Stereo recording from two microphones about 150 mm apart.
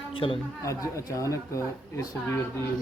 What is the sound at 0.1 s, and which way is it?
Speech, 35° left (ahead or behind).